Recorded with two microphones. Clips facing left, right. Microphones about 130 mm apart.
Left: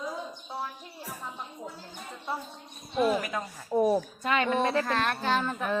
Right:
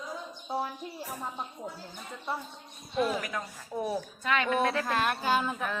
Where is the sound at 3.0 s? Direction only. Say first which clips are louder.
Left 3 dB; 5° left (ahead or behind).